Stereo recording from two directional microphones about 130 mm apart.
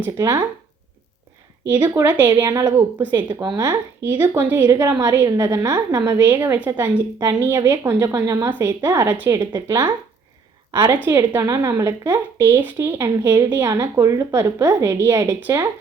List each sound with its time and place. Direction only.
0.0 s a woman's voice: 25° right (ahead or behind)
1.8 s a woman's voice: 25° right (ahead or behind)
3.0 s speech: 10° right (ahead or behind)
3.4 s a woman's voice: 30° right (ahead or behind)
4.1 s a woman's voice: 15° right (ahead or behind)
10.9 s a woman's voice: 15° right (ahead or behind)